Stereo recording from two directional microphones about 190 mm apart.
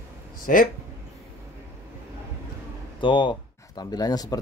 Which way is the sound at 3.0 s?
25° left (ahead or behind).